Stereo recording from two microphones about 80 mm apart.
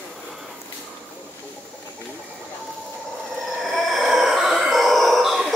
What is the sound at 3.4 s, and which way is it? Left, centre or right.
Grunt, centre.